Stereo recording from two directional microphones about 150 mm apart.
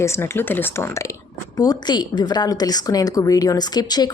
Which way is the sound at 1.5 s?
25° left (ahead or behind).